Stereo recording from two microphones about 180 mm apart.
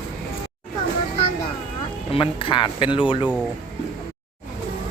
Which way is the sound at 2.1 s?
30° left (ahead or behind).